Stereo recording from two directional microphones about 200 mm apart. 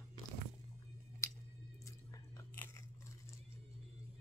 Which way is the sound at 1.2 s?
15° left (ahead or behind).